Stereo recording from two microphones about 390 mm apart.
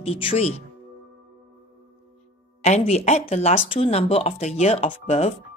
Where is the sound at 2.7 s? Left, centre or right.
Centre.